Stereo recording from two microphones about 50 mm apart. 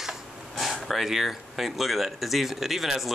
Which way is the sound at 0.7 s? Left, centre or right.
Centre.